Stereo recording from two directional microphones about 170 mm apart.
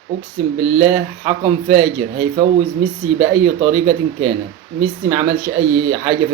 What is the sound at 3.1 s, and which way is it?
Speech, 5° right (ahead or behind).